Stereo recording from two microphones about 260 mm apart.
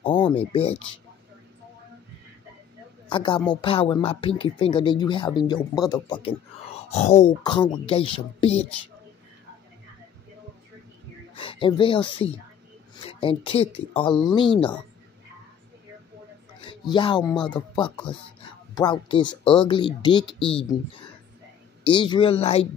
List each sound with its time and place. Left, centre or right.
0.0 s a sound: left
0.5 s speech: left
3.1 s speech: centre
11.3 s speech: centre
16.6 s speech: centre
21.8 s speech: centre